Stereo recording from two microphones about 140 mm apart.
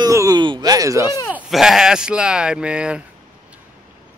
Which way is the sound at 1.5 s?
Centre (ahead or behind).